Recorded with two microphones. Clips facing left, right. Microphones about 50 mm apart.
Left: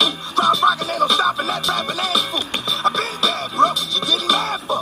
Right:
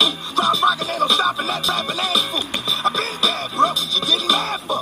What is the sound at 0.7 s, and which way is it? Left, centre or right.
Music, right.